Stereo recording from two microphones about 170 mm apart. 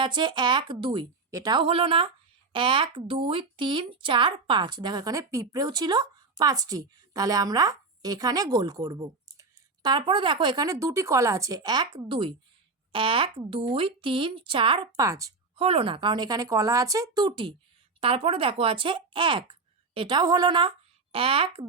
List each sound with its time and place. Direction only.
0.0 s speech: 30° right (ahead or behind)
15.5 s speech: 35° right (ahead or behind)